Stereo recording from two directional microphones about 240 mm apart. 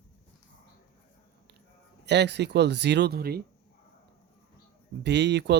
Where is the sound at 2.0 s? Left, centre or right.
Right.